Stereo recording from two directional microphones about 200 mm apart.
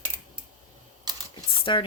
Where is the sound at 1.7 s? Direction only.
25° left (ahead or behind).